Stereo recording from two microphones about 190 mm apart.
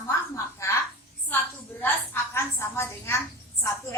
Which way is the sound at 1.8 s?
10° left (ahead or behind).